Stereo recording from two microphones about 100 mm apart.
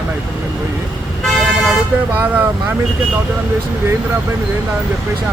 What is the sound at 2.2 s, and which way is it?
Speech, 15° right (ahead or behind).